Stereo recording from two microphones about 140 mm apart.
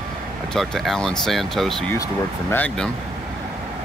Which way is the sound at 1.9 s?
25° left (ahead or behind).